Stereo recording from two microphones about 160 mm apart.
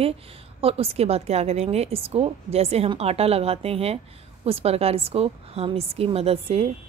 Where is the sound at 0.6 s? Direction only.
35° right (ahead or behind).